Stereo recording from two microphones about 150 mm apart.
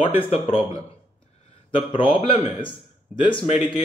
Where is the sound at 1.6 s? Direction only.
35° left (ahead or behind).